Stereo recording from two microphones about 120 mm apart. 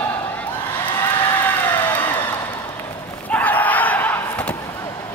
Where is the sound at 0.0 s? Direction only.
15° left (ahead or behind).